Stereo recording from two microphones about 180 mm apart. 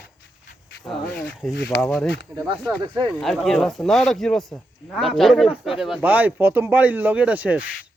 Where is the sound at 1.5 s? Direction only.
70° left (ahead or behind).